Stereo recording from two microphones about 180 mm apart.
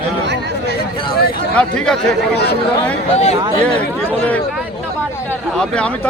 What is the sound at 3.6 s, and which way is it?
Speech, 5° left (ahead or behind).